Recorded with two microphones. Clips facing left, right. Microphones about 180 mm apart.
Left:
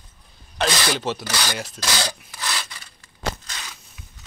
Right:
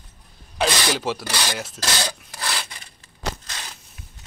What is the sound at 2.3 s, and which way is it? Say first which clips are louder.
Rub: right 1 dB; 35° right (ahead or behind).